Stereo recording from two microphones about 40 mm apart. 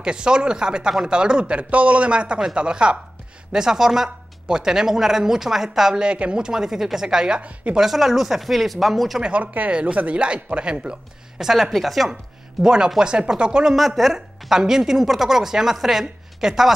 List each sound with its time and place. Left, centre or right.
0.0 s speech: right
3.5 s speech: centre
5.9 s speech: right
7.7 s speech: centre
9.3 s speech: right
9.7 s speech: right
11.3 s speech: centre
12.6 s speech: centre
13.7 s speech: centre